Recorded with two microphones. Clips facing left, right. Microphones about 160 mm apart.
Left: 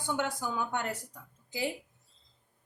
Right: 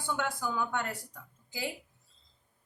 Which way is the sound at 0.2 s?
20° left (ahead or behind).